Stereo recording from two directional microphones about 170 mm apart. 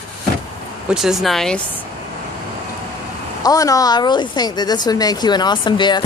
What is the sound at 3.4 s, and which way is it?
A woman's voice, 20° left (ahead or behind).